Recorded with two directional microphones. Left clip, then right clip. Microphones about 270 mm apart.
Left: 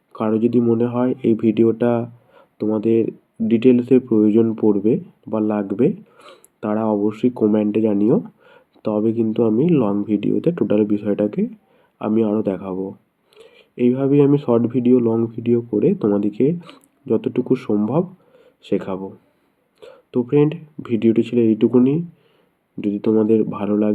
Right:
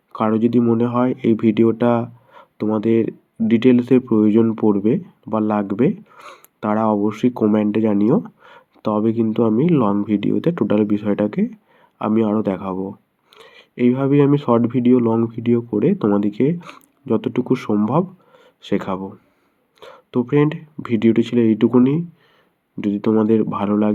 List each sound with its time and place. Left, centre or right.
0.1 s speech: centre